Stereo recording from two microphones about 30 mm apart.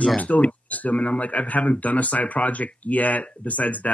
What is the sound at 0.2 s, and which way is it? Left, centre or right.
Speech, left.